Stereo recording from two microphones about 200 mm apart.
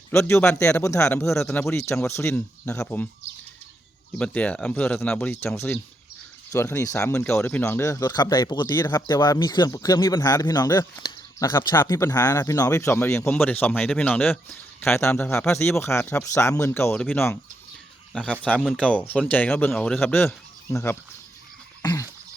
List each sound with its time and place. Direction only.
0.1 s speech: 15° left (ahead or behind)
1.4 s speech: centre (ahead or behind)
1.6 s speech: 15° left (ahead or behind)
4.2 s speech: 5° left (ahead or behind)
21.8 s a sound: 15° left (ahead or behind)